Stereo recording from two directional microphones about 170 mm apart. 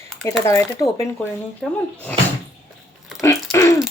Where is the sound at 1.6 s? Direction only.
5° left (ahead or behind).